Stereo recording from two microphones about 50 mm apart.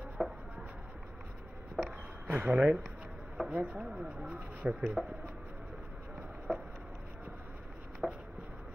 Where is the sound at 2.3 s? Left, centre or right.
Right.